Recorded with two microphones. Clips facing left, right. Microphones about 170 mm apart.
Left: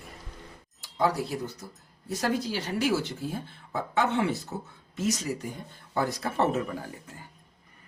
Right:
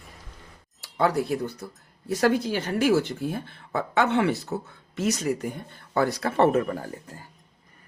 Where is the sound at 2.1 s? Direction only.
70° right (ahead or behind).